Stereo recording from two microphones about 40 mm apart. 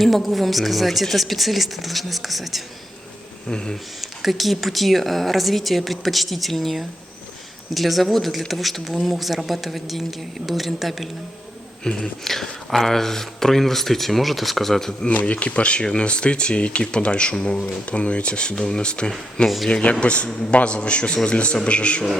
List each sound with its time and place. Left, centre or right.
0.0 s speech: centre
3.5 s speech: centre
4.0 s speech: centre
11.8 s speech: centre
15.1 s speech: left